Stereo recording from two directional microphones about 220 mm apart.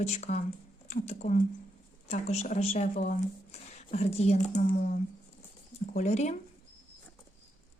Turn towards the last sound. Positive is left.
turn(degrees=30)  # may be behind; listen again after turning